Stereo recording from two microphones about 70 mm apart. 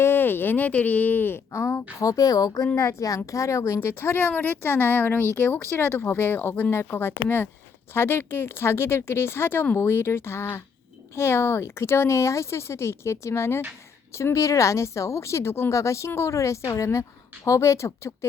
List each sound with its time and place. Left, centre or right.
0.0 s speech: left
1.5 s a woman's voice: left
2.0 s a woman's voice: left